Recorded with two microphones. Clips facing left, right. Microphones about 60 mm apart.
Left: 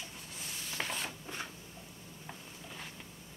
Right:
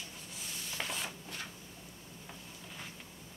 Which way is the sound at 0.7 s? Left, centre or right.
Centre.